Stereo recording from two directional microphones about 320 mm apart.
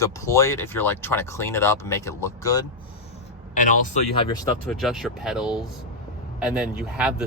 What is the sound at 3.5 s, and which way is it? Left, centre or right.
Speech, left.